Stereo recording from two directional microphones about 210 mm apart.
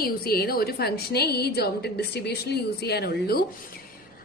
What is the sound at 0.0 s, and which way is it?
A woman's voice, 45° left (ahead or behind).